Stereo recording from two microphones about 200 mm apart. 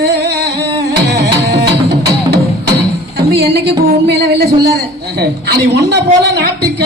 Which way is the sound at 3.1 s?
55° right (ahead or behind).